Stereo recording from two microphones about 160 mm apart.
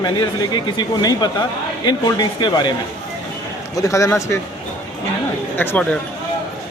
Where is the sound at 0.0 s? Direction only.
25° left (ahead or behind).